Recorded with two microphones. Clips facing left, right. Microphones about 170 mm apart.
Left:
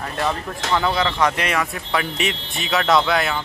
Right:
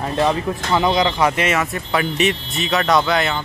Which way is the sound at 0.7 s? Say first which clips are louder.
Right 3 dB; 15° right (ahead or behind).